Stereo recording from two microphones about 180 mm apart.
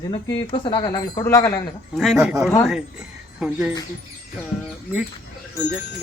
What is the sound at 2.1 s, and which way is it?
Speech, 15° right (ahead or behind).